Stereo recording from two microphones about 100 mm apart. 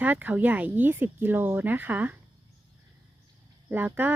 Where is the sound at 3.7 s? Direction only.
20° right (ahead or behind).